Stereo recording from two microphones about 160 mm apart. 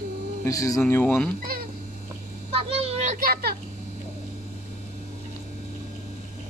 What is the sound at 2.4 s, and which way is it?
Vehicle, 40° right (ahead or behind).